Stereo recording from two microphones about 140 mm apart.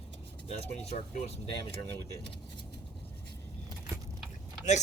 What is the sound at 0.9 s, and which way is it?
Speech, 50° left (ahead or behind).